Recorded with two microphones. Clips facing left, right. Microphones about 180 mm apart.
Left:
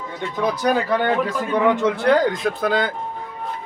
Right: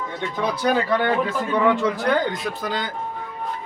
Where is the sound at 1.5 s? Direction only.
20° left (ahead or behind); by 2.3 s 35° left (ahead or behind).